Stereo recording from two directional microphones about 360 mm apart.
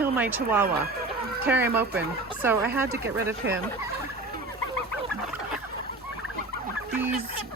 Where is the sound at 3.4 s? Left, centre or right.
Right.